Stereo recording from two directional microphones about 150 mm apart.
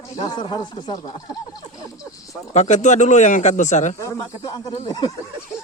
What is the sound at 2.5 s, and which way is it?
Speech, 50° left (ahead or behind).